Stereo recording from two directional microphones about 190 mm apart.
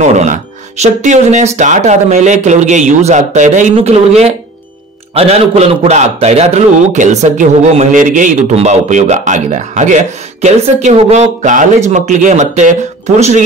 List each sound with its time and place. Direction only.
0.0 s a man's voice: 40° right (ahead or behind)